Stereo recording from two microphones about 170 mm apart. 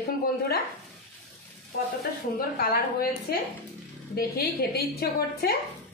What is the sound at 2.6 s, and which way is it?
A woman's voice, 60° left (ahead or behind).